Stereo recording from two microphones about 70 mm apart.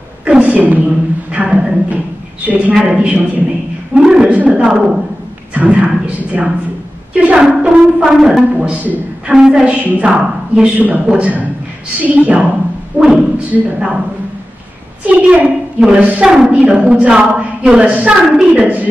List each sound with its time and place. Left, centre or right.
0.2 s a sound: centre
0.8 s a woman's voice: centre
2.4 s a man's voice: right
7.3 s a woman's voice: centre
8.5 s a man's voice: right
15.0 s a man's voice: right